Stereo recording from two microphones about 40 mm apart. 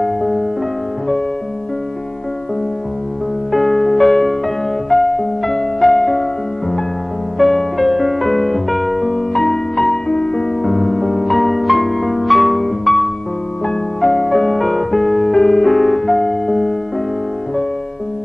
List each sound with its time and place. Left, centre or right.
0.0 s music: centre
3.5 s music: centre
7.3 s music: centre
10.0 s music: centre
10.6 s music: centre